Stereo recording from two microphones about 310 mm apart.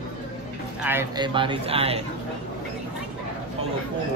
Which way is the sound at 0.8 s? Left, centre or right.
Centre.